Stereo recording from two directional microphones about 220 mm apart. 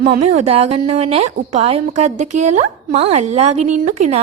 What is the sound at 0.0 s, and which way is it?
A woman's voice, 30° right (ahead or behind).